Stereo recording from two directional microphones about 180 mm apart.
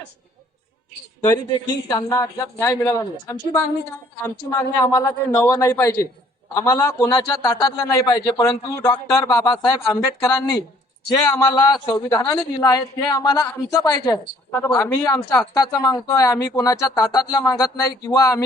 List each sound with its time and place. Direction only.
1.2 s a woman's voice: 20° left (ahead or behind)
11.1 s a woman's voice: 20° left (ahead or behind)